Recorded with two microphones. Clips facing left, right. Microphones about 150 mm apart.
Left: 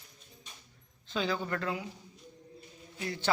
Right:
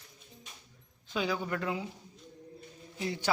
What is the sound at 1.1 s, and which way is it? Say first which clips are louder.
Speech: even; 10° right (ahead or behind).